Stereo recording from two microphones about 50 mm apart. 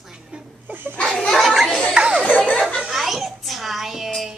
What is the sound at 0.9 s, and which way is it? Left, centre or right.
Speech, centre.